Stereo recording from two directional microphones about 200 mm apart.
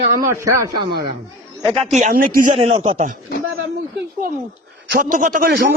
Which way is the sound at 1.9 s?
40° right (ahead or behind).